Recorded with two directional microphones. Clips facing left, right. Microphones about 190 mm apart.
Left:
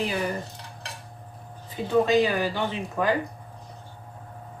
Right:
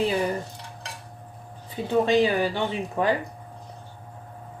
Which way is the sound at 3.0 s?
25° right (ahead or behind).